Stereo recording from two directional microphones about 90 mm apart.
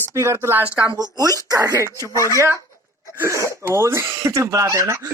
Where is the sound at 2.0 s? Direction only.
35° left (ahead or behind).